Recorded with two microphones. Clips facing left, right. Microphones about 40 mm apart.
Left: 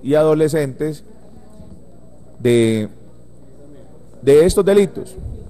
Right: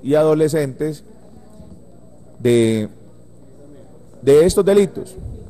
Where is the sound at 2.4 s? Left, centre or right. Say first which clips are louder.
Even; left.